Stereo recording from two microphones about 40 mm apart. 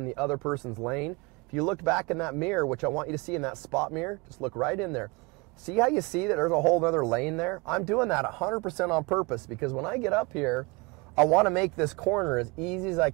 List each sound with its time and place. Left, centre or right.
0.0 s speech: centre